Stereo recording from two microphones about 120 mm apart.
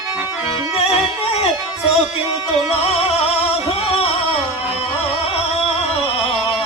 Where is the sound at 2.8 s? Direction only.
60° left (ahead or behind).